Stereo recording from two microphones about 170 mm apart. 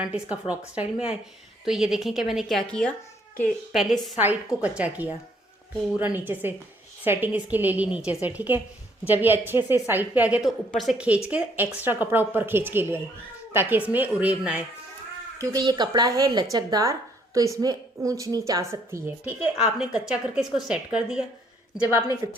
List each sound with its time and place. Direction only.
0.0 s a woman's voice: 5° right (ahead or behind)
15.4 s a woman's voice: 20° right (ahead or behind); by 21.2 s 5° right (ahead or behind)
21.8 s a woman's voice: 20° left (ahead or behind)